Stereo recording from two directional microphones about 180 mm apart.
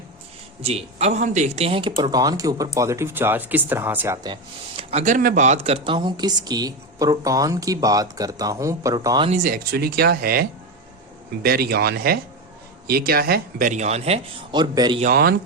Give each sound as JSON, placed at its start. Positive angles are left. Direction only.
{"t": 0.6, "sound": "speech", "side_deg": -35}
{"t": 4.8, "sound": "speech", "side_deg": -35}
{"t": 9.3, "sound": "speech", "side_deg": -50}
{"t": 11.4, "sound": "speech", "side_deg": -60}
{"t": 15.0, "sound": "speech", "side_deg": -55}